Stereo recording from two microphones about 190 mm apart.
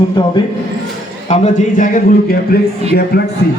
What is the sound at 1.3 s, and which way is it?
A man's voice, 40° left (ahead or behind).